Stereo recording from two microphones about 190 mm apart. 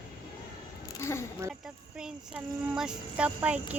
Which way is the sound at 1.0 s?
15° left (ahead or behind).